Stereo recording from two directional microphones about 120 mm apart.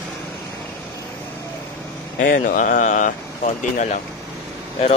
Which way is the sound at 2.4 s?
90° left.